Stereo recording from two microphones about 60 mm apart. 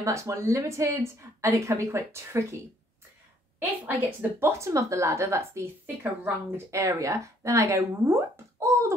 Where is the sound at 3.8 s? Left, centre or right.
Right.